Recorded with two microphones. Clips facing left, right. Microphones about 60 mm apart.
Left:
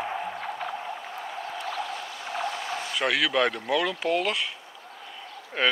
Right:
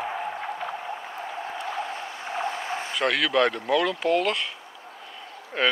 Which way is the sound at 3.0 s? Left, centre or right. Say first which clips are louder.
Right 2 dB; centre.